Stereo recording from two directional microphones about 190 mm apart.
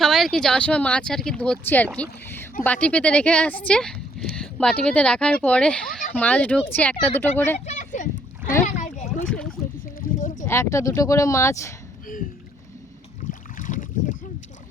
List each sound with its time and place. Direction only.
0.0 s speech: centre (ahead or behind)
7.6 s a sound: 40° left (ahead or behind)
9.3 s rowboat: 5° left (ahead or behind)
10.0 s a sound: 45° left (ahead or behind)
10.4 s speech: 15° left (ahead or behind)
13.6 s boat: 45° left (ahead or behind)